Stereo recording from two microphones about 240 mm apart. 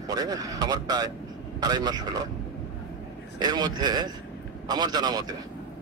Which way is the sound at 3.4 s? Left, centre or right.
Centre.